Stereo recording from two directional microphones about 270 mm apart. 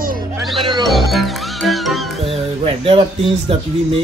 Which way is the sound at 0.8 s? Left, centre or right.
Centre.